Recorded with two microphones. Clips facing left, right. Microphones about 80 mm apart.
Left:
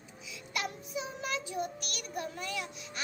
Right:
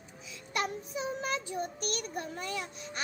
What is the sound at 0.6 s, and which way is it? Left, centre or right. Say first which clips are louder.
A child's voice: right 3 dB; right.